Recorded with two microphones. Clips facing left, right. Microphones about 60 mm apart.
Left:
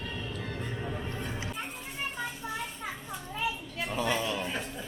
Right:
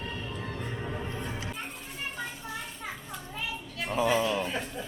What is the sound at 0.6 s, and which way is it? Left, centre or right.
Music, centre.